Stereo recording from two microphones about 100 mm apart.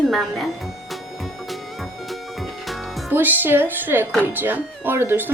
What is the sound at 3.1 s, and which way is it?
Speech, 20° right (ahead or behind).